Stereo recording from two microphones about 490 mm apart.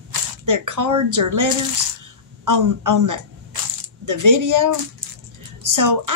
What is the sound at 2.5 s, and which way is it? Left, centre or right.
A woman's voice, right.